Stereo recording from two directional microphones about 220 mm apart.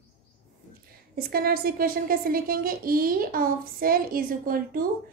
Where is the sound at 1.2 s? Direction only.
45° right (ahead or behind).